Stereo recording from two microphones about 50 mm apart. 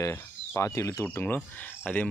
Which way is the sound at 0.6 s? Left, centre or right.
Left.